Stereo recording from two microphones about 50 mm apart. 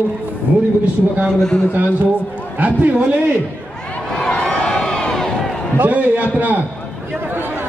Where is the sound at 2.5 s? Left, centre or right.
Right.